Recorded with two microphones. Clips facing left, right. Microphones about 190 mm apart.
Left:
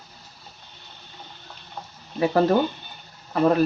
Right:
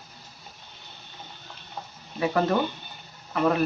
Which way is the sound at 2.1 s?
30° left (ahead or behind).